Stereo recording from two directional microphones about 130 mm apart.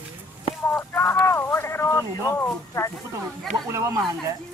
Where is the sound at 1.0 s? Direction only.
15° left (ahead or behind).